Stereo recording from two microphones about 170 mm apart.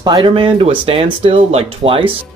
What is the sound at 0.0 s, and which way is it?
Speech, 25° right (ahead or behind).